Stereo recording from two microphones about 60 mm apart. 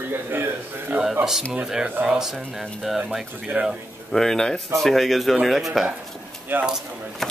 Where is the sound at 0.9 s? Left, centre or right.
Right.